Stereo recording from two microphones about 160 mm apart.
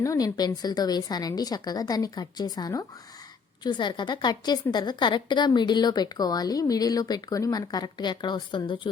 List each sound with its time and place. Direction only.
0.0 s a woman's voice: 20° left (ahead or behind)